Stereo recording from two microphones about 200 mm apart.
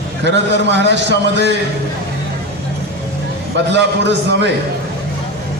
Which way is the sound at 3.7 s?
60° right (ahead or behind).